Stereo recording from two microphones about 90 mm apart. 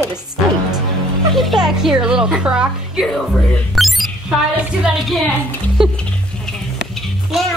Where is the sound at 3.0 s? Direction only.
5° left (ahead or behind).